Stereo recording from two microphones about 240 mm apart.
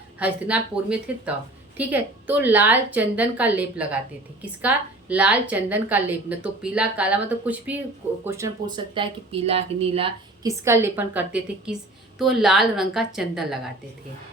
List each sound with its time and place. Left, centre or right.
0.2 s a woman's voice: centre; by 10.1 s right
10.4 s a woman's voice: centre